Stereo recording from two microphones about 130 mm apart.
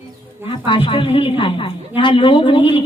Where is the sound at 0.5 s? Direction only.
40° left (ahead or behind).